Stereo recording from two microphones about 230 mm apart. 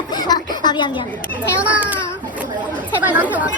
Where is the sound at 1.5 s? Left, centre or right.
Centre.